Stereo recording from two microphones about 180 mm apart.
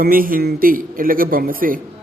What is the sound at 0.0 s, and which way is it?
A man's voice, 50° right (ahead or behind).